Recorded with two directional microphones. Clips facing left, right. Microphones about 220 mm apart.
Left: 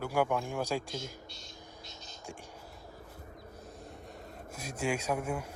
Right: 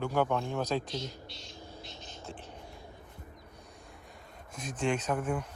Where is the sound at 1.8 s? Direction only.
40° left (ahead or behind).